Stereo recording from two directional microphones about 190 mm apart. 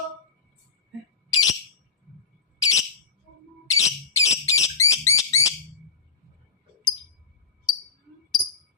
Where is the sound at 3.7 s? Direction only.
15° left (ahead or behind).